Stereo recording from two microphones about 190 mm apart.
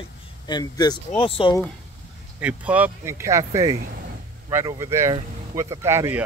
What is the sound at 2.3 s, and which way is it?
Speech, 5° right (ahead or behind).